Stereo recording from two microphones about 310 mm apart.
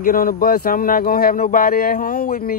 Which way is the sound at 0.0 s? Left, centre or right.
Left.